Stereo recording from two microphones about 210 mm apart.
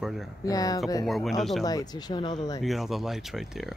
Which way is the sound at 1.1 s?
Centre (ahead or behind).